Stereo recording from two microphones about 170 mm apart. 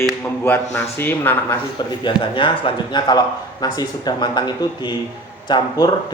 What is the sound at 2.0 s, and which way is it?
A man's voice, 30° left (ahead or behind).